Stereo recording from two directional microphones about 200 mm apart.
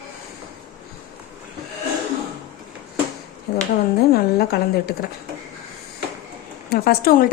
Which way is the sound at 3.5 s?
50° left (ahead or behind).